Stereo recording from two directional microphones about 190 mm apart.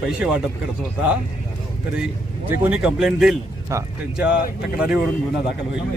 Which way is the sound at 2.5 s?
5° right (ahead or behind).